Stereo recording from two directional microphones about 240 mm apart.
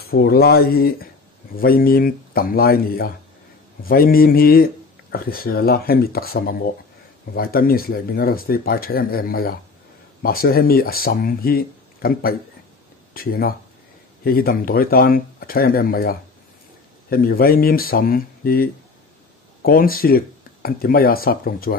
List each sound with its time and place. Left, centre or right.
0.0 s speech: left